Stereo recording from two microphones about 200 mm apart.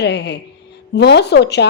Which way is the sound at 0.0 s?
60° left (ahead or behind).